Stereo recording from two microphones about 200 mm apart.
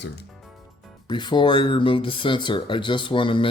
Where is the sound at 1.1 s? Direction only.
25° left (ahead or behind).